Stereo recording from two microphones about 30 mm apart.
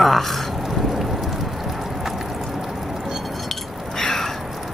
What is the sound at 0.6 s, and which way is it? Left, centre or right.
Vehicle, centre.